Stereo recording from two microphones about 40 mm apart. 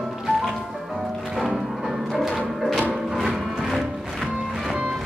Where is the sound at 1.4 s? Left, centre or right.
Centre.